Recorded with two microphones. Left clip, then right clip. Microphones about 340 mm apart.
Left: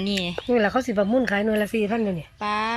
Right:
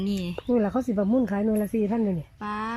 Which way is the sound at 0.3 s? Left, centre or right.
Left.